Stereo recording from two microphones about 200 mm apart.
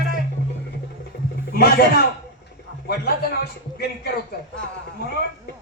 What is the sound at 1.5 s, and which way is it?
A man's voice, 50° left (ahead or behind).